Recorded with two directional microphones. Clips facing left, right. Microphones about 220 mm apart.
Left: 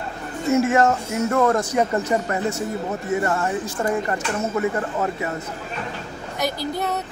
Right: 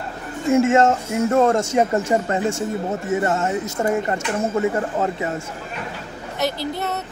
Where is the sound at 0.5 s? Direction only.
25° right (ahead or behind).